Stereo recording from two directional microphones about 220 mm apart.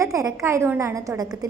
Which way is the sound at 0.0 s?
15° right (ahead or behind).